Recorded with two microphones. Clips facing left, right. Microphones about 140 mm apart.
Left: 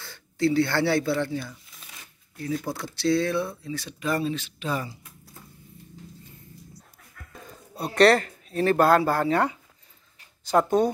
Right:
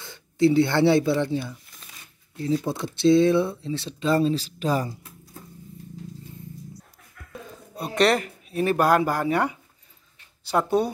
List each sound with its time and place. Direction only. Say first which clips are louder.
0.0 s speech: right 5 dB; 20° right (ahead or behind); by 4.9 s 40° right (ahead or behind)
7.9 s speech: left 3 dB; 20° right (ahead or behind)
10.8 s speech: even; 10° right (ahead or behind)